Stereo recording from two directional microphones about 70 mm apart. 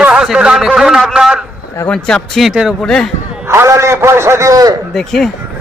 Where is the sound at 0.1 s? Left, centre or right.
Centre.